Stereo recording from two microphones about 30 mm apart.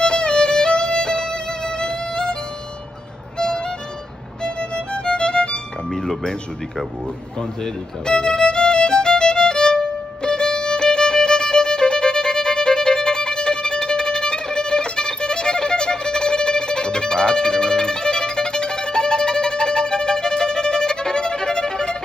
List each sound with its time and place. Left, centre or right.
0.0 s music: left
3.3 s music: left
5.9 s chink: centre
8.0 s violin: left